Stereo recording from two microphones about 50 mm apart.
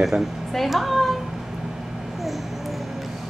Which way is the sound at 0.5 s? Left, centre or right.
Centre.